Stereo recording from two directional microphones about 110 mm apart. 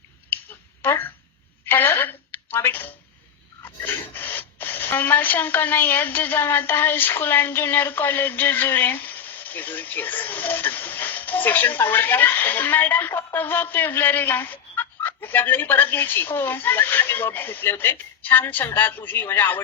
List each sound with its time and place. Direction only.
0.8 s a woman's voice: 20° left (ahead or behind)